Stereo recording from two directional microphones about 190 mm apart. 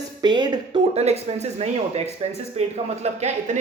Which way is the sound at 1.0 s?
35° right (ahead or behind).